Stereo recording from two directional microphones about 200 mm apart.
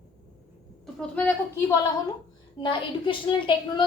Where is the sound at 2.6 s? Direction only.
25° left (ahead or behind).